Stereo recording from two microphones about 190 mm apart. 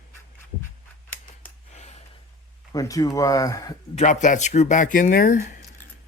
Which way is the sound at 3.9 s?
35° left (ahead or behind).